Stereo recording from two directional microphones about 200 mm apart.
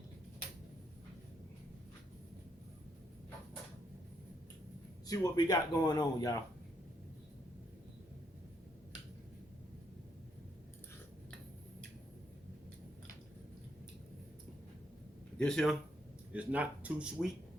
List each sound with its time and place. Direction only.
5.0 s speech: 20° left (ahead or behind)
15.4 s speech: 5° left (ahead or behind)